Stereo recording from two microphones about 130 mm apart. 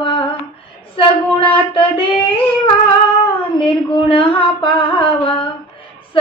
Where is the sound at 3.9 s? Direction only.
40° left (ahead or behind).